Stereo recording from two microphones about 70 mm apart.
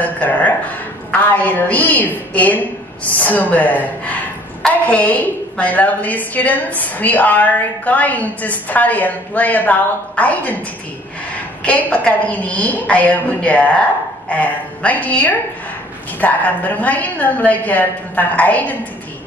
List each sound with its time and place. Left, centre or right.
0.0 s a sound: left
1.1 s a woman's voice: left
11.6 s a woman's voice: centre